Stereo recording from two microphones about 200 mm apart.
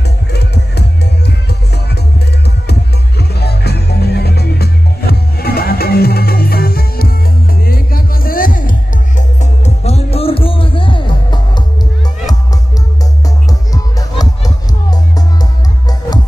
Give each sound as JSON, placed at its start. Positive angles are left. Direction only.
{"t": 0.0, "sound": "music", "side_deg": 55}
{"t": 13.5, "sound": "music", "side_deg": 15}